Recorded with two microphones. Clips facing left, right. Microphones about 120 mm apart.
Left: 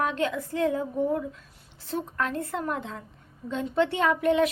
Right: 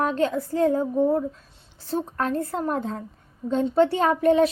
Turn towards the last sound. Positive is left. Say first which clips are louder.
# right 4 dB
turn(degrees=-35)  # may be behind; listen again after turning